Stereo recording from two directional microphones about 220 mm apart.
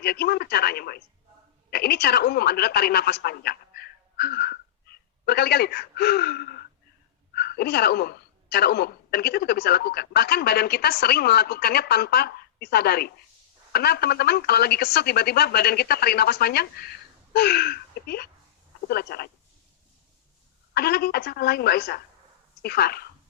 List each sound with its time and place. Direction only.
0.0 s speech: 45° left (ahead or behind)
20.7 s speech: 45° left (ahead or behind)